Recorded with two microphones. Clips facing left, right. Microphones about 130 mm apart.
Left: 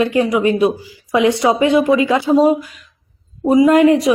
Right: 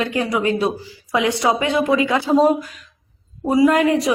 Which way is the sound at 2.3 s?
Centre (ahead or behind).